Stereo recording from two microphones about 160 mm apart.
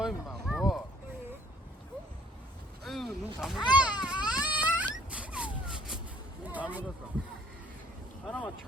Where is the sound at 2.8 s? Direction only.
Centre (ahead or behind).